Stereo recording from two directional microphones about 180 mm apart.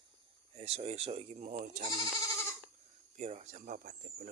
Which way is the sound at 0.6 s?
35° right (ahead or behind).